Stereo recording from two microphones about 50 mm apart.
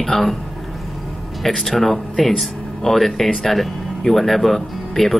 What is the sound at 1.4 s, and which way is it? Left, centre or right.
Speech, centre.